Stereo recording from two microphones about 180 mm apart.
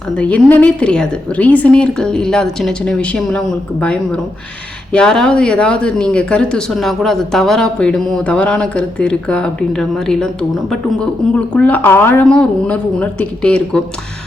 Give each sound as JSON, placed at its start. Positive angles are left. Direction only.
{"t": 0.2, "sound": "a woman's voice", "side_deg": 5}